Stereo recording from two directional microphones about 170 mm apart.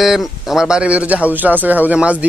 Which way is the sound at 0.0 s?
Centre (ahead or behind).